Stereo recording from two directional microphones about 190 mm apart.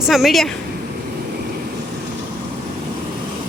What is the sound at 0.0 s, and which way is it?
Speech, centre (ahead or behind).